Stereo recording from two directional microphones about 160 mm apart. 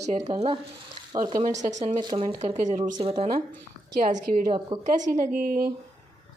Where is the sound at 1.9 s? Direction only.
30° right (ahead or behind).